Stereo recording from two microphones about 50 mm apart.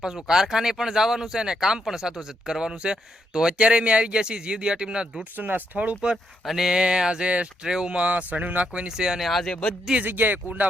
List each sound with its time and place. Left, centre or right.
0.0 s speech: centre
5.4 s speech: right
6.4 s speech: centre
6.7 s speech: centre
8.9 s speech: centre
9.2 s speech: centre
9.5 s speech: centre
10.0 s speech: right